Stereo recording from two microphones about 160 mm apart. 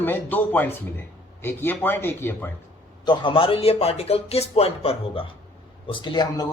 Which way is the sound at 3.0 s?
30° left (ahead or behind).